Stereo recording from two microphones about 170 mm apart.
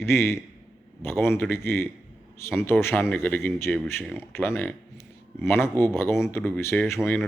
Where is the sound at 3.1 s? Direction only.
10° left (ahead or behind).